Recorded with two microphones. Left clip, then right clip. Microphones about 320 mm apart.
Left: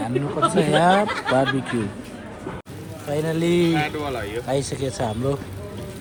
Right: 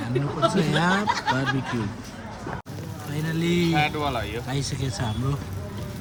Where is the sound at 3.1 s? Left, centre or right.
Centre.